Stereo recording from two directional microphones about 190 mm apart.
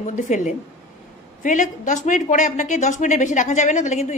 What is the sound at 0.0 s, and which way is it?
Speech, 40° left (ahead or behind).